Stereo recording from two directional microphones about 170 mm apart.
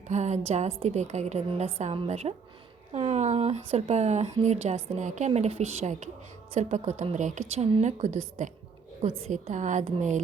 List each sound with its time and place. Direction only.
0.1 s a woman's voice: 40° right (ahead or behind)
9.0 s a woman's voice: 35° right (ahead or behind)